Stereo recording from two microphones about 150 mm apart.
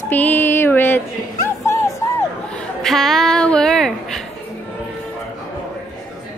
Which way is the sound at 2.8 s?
Centre (ahead or behind).